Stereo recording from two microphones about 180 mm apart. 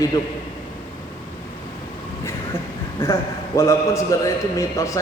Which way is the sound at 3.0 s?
15° left (ahead or behind).